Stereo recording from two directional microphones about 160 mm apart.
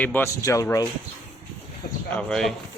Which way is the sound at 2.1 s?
5° left (ahead or behind).